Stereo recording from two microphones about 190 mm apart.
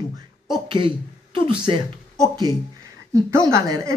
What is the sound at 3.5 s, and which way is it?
Speech, 15° right (ahead or behind).